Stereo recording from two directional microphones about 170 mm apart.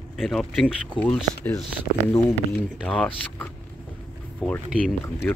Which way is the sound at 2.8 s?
5° left (ahead or behind).